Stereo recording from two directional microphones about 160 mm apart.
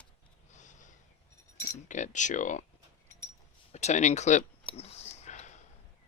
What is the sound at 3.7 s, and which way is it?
Speech, 45° left (ahead or behind).